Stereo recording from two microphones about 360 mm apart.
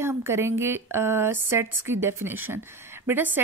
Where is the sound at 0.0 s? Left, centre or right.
Centre.